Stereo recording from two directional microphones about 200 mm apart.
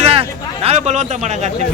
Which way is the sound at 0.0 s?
30° right (ahead or behind).